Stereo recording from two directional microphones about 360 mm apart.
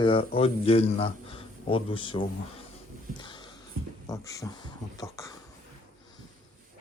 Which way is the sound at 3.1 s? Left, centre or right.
Centre.